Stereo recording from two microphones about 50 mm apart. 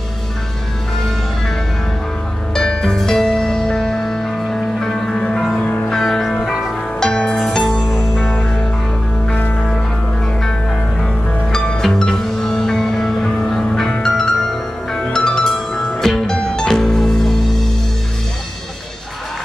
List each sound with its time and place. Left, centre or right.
2.5 s music: centre
5.9 s music: centre
7.0 s music: centre
9.3 s music: left
11.5 s music: centre